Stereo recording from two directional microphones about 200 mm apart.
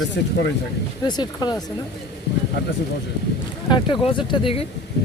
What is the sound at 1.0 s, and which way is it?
Speech, 20° left (ahead or behind).